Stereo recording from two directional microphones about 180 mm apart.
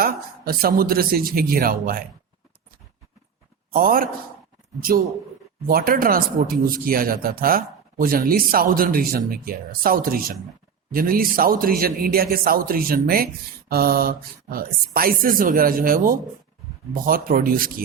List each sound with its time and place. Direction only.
0.0 s a man's voice: 55° right (ahead or behind)
3.7 s a man's voice: 55° right (ahead or behind)
5.6 s a man's voice: 50° right (ahead or behind)